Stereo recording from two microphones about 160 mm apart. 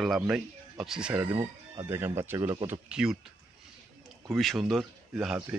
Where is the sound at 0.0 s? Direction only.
Centre (ahead or behind).